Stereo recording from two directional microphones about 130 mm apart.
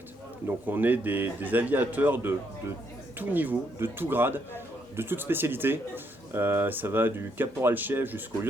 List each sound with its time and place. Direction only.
0.4 s a man's voice: 15° right (ahead or behind)